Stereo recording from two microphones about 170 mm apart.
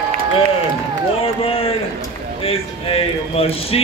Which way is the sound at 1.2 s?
35° left (ahead or behind).